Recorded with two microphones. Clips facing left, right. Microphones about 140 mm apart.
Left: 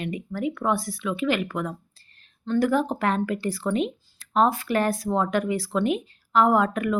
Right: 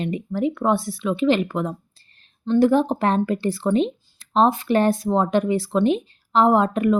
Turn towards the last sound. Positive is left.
turn(degrees=-25)  # may be behind; listen again after turning